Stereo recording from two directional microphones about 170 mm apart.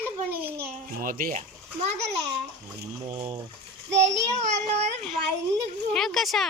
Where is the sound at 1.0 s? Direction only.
55° right (ahead or behind).